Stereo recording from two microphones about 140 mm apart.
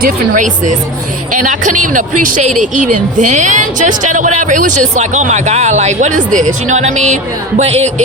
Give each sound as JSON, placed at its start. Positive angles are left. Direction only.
{"t": 0.0, "sound": "speech", "side_deg": -65}
{"t": 7.6, "sound": "music", "side_deg": -50}